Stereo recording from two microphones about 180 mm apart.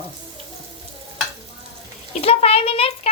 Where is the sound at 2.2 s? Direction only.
35° left (ahead or behind).